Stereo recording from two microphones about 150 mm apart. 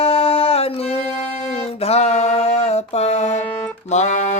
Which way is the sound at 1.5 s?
45° left (ahead or behind).